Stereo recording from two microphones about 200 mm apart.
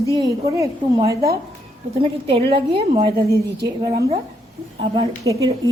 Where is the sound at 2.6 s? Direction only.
25° right (ahead or behind).